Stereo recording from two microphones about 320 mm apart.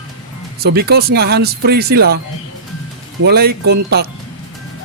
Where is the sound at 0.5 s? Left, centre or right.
Right.